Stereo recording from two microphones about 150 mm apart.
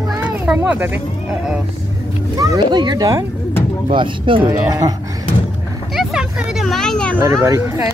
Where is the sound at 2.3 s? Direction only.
25° right (ahead or behind).